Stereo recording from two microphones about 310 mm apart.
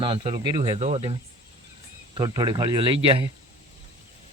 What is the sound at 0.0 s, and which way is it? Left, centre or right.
Speech, centre.